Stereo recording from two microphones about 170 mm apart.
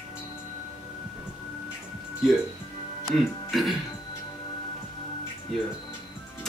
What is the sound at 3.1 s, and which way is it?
Speech, centre (ahead or behind).